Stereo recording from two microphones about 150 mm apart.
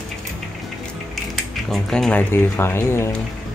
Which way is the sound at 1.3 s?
Centre (ahead or behind).